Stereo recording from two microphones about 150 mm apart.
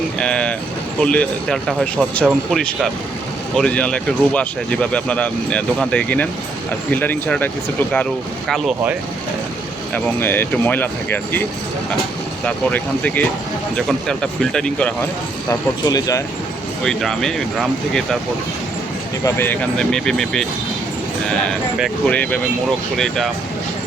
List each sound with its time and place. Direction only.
0.2 s speech: 5° left (ahead or behind)
9.9 s speech: 15° left (ahead or behind)
12.5 s speech: 10° left (ahead or behind)
15.4 s speech: 25° left (ahead or behind)
16.8 s speech: 5° left (ahead or behind)
19.2 s speech: 15° left (ahead or behind)